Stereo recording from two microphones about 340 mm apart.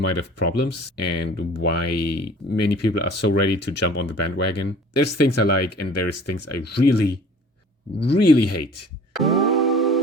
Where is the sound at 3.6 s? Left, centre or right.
Left.